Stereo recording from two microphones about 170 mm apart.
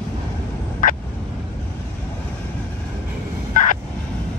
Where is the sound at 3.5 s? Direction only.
50° left (ahead or behind).